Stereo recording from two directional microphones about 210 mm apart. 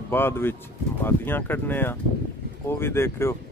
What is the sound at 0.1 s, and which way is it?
Speech, 10° left (ahead or behind).